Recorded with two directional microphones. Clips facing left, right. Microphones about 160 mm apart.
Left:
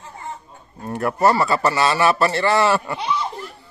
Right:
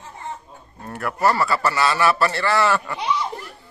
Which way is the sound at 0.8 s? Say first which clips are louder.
Left 3 dB; 25° left (ahead or behind).